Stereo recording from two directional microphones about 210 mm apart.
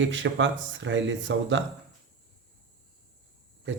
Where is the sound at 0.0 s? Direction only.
60° right (ahead or behind).